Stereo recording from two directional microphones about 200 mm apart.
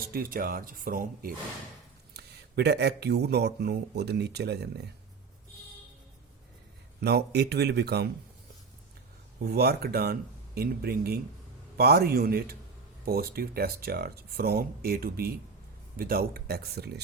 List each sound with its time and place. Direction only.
0.0 s speech: 45° right (ahead or behind)
2.1 s speech: 55° right (ahead or behind)
7.0 s speech: 55° right (ahead or behind)
9.4 s speech: 50° right (ahead or behind)